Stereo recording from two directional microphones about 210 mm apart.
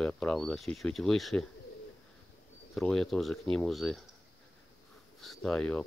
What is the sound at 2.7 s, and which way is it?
Speech, centre (ahead or behind).